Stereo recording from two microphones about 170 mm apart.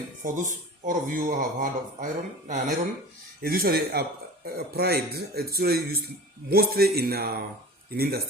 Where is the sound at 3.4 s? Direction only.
60° right (ahead or behind).